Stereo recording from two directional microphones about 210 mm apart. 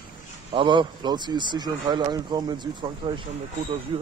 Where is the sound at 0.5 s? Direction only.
20° right (ahead or behind).